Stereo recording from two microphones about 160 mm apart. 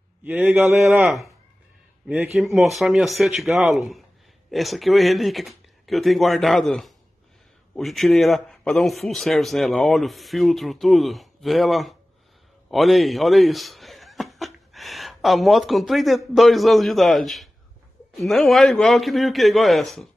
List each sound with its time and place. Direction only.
0.2 s a man's voice: 10° right (ahead or behind)
12.6 s chuckle: centre (ahead or behind)
16.3 s a man's voice: centre (ahead or behind)